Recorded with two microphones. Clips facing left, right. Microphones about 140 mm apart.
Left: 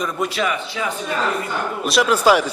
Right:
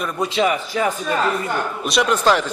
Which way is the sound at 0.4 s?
40° right (ahead or behind).